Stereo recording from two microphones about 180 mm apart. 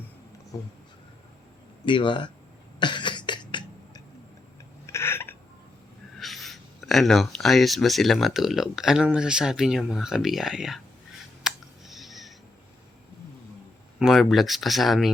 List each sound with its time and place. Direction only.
0.5 s speech: 20° left (ahead or behind)
1.8 s speech: 25° left (ahead or behind)
2.7 s cough: 25° left (ahead or behind)
4.9 s a sound: 15° left (ahead or behind)
6.1 s speech: centre (ahead or behind)
11.4 s clicking: centre (ahead or behind)
14.0 s speech: centre (ahead or behind)